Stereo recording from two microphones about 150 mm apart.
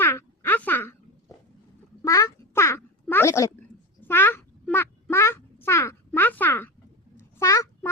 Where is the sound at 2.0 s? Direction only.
20° left (ahead or behind).